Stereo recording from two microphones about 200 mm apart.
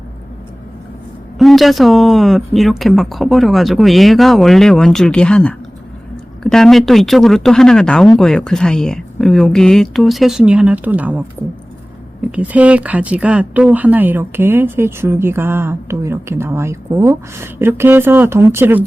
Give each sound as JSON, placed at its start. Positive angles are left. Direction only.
{"t": 1.4, "sound": "speech", "side_deg": 0}
{"t": 12.3, "sound": "speech", "side_deg": -5}